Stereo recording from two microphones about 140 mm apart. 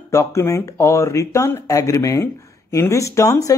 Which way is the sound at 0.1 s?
20° left (ahead or behind).